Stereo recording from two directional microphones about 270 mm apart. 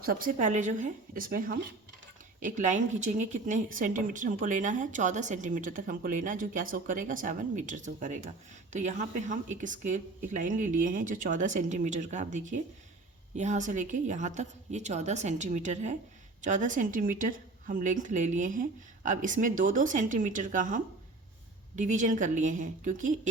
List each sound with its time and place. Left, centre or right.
0.0 s speech: right